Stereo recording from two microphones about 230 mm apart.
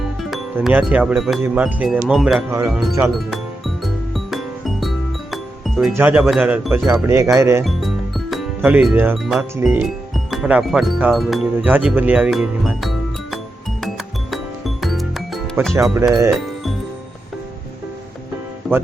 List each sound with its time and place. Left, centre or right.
0.0 s speech: centre
2.5 s speech: centre
4.1 s music: centre
5.9 s speech: centre
7.6 s music: centre
9.6 s speech: centre
14.8 s music: centre
15.7 s speech: centre
18.6 s speech: centre